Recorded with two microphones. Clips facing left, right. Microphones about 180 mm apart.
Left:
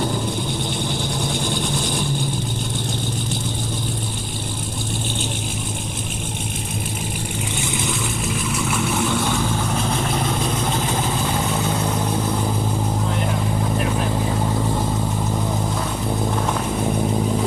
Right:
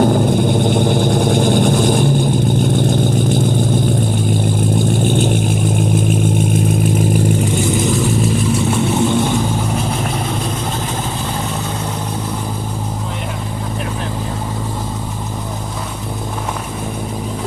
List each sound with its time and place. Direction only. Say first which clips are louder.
0.0 s vehicle: right 10 dB; 50° right (ahead or behind)
5.0 s vehicle: right 12 dB; 50° right (ahead or behind)
7.5 s vehicle: right 10 dB; 40° right (ahead or behind)